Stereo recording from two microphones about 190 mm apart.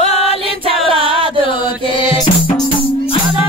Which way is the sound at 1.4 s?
25° left (ahead or behind).